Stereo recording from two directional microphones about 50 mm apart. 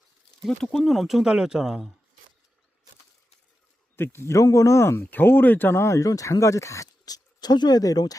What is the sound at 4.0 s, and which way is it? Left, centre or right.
Speech, left.